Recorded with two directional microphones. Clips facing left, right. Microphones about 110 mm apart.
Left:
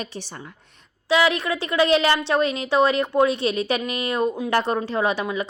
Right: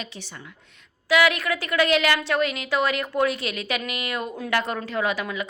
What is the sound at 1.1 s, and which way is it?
A woman's voice, 25° left (ahead or behind).